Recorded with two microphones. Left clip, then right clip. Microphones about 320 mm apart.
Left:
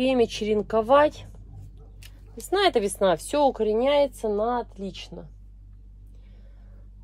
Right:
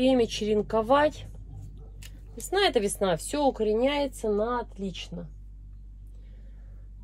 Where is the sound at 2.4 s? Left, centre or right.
Left.